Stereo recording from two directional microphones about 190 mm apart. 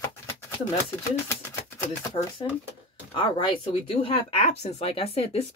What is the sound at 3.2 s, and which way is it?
Speech, 25° left (ahead or behind).